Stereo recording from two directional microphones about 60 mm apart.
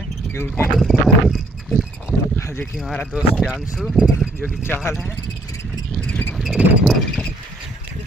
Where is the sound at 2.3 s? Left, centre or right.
Left.